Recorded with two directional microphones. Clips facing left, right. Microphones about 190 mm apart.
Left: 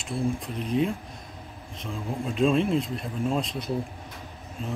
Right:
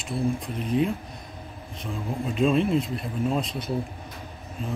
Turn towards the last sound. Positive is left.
turn(degrees=0)  # may be behind; listen again after turning